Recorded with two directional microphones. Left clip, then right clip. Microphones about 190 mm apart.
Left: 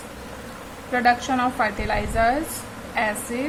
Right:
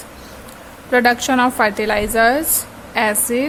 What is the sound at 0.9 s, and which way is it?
A woman's voice, 65° right (ahead or behind).